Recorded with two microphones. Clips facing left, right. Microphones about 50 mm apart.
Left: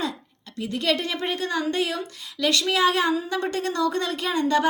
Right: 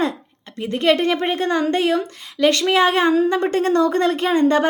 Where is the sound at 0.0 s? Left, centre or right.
Right.